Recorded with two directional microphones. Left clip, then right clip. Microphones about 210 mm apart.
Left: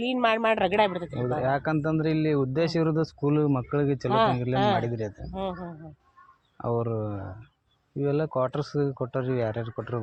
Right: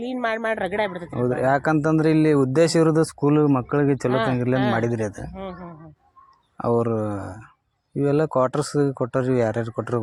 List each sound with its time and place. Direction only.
0.0 s speech: centre (ahead or behind)
1.1 s speech: 65° right (ahead or behind)
4.1 s speech: 5° left (ahead or behind)
4.8 s speech: 70° right (ahead or behind)
5.3 s speech: 5° left (ahead or behind)
6.6 s speech: 70° right (ahead or behind)